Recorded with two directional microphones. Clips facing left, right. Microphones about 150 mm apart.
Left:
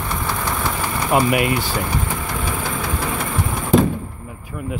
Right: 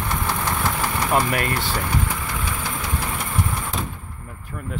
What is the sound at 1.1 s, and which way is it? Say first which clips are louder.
Speech: left 6 dB; 10° left (ahead or behind).